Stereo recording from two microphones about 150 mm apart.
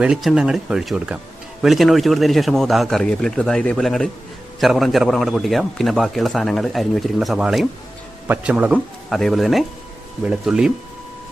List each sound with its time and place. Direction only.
0.0 s a man's voice: 5° right (ahead or behind)